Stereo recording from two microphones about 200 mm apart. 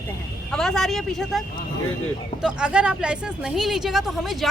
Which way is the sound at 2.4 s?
5° right (ahead or behind).